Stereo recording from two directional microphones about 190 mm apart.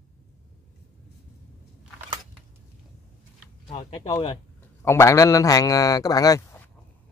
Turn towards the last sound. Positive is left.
turn(degrees=20)  # may be behind; listen again after turning